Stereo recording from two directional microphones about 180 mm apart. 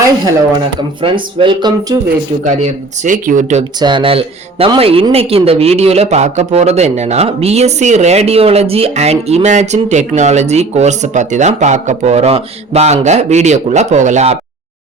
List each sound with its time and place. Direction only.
1.0 s speech: 30° right (ahead or behind)
2.4 s speech: 45° right (ahead or behind)
3.8 s speech: 25° right (ahead or behind); by 14.3 s 40° right (ahead or behind)